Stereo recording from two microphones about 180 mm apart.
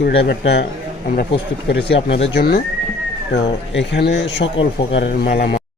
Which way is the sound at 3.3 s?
80° left.